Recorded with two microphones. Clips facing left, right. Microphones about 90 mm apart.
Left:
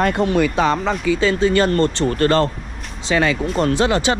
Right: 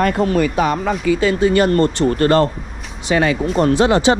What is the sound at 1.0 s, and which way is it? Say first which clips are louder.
Speech: right 3 dB; 40° right (ahead or behind).